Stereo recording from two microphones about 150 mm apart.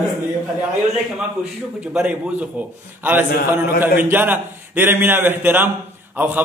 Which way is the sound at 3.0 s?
15° right (ahead or behind).